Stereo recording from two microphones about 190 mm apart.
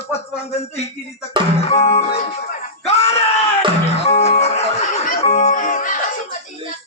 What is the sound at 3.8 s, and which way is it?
Music, 35° left (ahead or behind).